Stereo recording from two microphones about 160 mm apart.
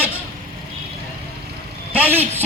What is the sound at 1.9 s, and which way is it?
Speech, 10° right (ahead or behind).